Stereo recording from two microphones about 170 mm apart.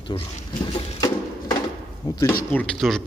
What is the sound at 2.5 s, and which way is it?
Speech, 5° left (ahead or behind).